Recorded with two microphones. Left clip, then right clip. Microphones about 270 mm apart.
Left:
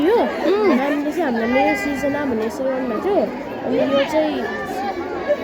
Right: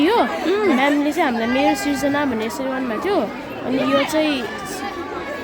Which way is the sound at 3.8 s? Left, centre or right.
Right.